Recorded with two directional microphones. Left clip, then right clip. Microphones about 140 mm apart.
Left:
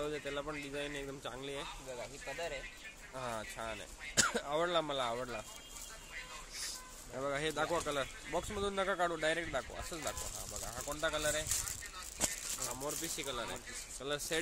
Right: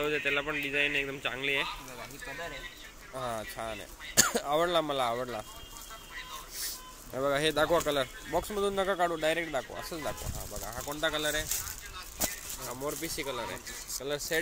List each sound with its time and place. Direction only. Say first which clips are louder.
0.1 s a man's voice: right 10 dB; centre (ahead or behind)
3.2 s speech: right 6 dB; 10° right (ahead or behind)
7.2 s speech: right 9 dB; 25° right (ahead or behind)
7.8 s speech: right 7 dB; 15° right (ahead or behind)
12.8 s speech: right 8 dB; 10° right (ahead or behind)
14.0 s speech: right 5 dB; 5° left (ahead or behind)